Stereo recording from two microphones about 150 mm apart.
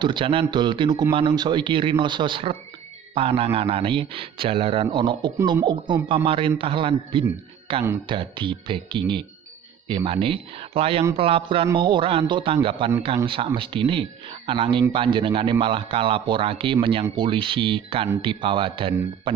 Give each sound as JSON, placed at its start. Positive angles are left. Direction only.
{"t": 0.0, "sound": "speech", "side_deg": -35}